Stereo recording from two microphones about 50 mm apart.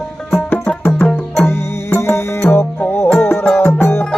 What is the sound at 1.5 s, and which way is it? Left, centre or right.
Music, left.